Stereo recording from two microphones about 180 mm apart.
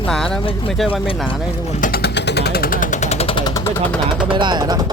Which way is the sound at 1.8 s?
55° left (ahead or behind).